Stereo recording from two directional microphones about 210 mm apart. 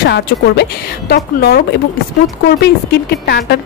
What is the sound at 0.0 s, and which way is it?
A woman's voice, 50° left (ahead or behind).